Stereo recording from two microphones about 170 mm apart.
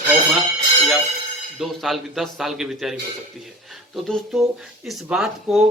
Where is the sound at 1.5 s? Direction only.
Centre (ahead or behind).